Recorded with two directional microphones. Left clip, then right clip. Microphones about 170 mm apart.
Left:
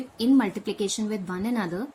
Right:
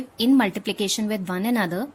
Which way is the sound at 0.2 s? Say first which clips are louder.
Right 3 dB; 60° right (ahead or behind).